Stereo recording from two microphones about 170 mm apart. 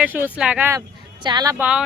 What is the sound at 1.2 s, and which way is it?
Speech, 20° right (ahead or behind).